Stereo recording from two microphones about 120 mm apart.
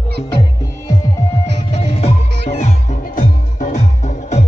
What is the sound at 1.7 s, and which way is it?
Music, 60° left (ahead or behind).